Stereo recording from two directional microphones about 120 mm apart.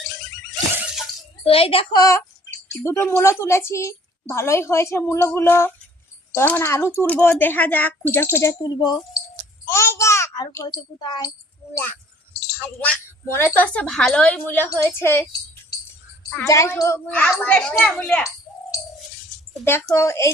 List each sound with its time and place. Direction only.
1.5 s a child's voice: 50° left (ahead or behind)
1.9 s a woman's voice: 30° left (ahead or behind)
8.6 s speech: 35° left (ahead or behind)
9.6 s a sound: 20° left (ahead or behind)
11.0 s speech: 35° left (ahead or behind)
12.5 s a woman's voice: 15° left (ahead or behind)
16.4 s a woman's voice: 25° left (ahead or behind)
17.1 s a woman's voice: 10° left (ahead or behind)
19.6 s a woman's voice: 20° left (ahead or behind)